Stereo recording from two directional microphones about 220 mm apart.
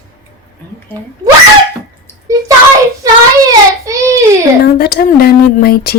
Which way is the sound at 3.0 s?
15° right (ahead or behind).